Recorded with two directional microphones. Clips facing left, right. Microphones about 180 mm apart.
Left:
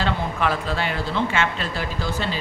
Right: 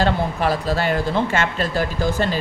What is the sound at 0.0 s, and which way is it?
Speech, 35° right (ahead or behind).